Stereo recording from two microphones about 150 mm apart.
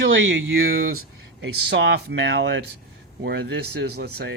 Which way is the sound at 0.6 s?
80° right.